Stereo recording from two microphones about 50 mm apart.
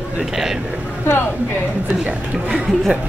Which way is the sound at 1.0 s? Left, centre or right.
Left.